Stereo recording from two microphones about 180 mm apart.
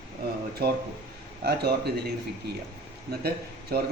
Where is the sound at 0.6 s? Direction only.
60° right (ahead or behind).